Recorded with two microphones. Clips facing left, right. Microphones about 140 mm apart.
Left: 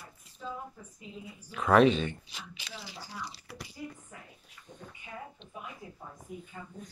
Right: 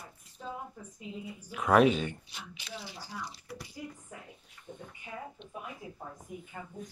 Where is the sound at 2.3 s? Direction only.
90° left.